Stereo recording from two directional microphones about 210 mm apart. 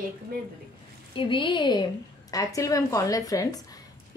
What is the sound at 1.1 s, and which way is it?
A woman's voice, 25° left (ahead or behind).